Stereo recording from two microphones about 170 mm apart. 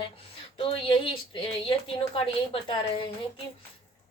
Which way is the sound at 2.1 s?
30° left (ahead or behind).